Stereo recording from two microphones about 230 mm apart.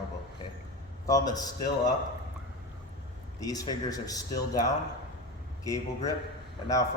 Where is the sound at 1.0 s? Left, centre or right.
Centre.